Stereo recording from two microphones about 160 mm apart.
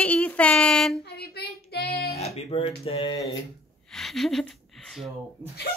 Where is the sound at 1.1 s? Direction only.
85° left.